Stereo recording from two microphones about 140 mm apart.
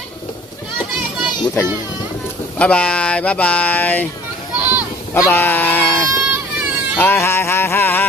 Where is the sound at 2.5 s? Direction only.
10° left (ahead or behind).